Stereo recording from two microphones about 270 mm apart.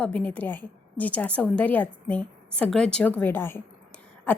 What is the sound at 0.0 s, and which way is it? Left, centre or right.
A woman's voice, centre.